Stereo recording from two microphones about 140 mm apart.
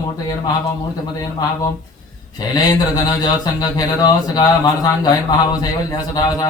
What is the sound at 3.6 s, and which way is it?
Speech, 30° left (ahead or behind).